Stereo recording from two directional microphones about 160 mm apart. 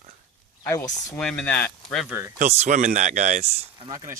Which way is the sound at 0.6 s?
15° left (ahead or behind).